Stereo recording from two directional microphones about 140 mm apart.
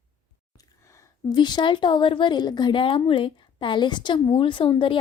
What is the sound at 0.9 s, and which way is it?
A woman's voice, 25° left (ahead or behind).